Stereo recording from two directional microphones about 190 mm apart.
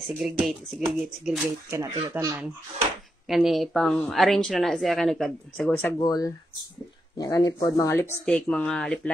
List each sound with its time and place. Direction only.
0.0 s speech: centre (ahead or behind)
1.7 s speech: 15° right (ahead or behind)
3.3 s speech: centre (ahead or behind)
5.9 s speech: 20° left (ahead or behind)